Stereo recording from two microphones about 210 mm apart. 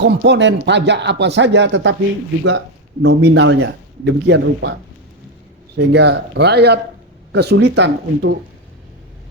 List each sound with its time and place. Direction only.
0.0 s speech: 55° right (ahead or behind)
3.0 s speech: 55° right (ahead or behind)
5.7 s speech: 55° right (ahead or behind)